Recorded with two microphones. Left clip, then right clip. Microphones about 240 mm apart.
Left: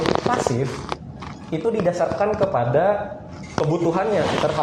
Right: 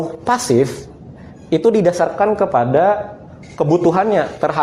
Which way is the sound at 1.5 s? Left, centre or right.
Right.